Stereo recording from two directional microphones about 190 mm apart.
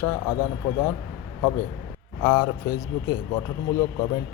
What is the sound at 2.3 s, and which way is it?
Speech, 25° left (ahead or behind).